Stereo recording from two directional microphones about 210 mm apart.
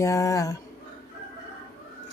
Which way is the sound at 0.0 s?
15° left (ahead or behind).